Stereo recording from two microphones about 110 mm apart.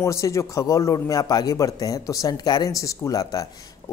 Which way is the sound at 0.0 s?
30° left (ahead or behind).